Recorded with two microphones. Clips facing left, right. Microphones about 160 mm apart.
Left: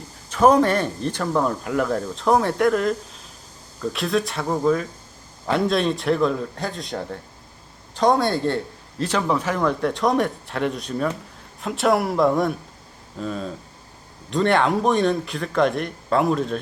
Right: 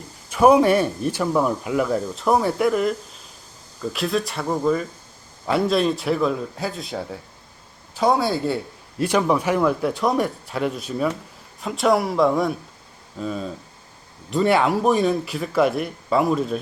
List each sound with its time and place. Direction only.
0.3 s speech: 10° right (ahead or behind)